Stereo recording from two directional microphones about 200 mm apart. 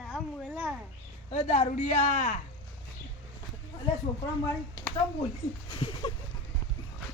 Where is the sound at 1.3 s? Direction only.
35° left (ahead or behind).